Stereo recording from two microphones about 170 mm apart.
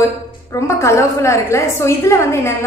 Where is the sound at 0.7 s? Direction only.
15° left (ahead or behind).